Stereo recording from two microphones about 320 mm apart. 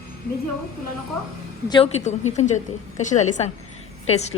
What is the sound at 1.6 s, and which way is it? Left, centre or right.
A woman's voice, centre.